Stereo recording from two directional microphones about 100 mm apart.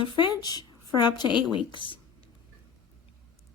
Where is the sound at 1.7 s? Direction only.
55° left (ahead or behind).